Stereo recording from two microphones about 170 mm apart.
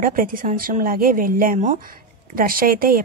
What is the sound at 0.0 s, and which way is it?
Speech, 55° right (ahead or behind).